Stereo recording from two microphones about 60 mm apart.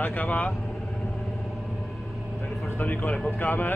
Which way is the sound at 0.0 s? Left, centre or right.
Left.